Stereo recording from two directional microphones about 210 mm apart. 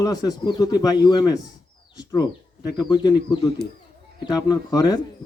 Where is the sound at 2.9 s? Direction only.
20° left (ahead or behind).